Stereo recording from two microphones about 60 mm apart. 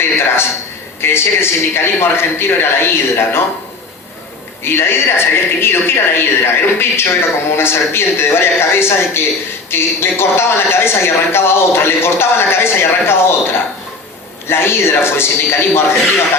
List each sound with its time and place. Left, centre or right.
1.0 s speech: left
4.6 s speech: left